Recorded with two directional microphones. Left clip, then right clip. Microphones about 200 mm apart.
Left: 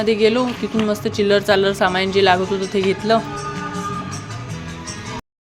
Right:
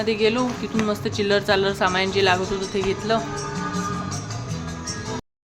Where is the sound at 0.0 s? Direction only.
20° left (ahead or behind).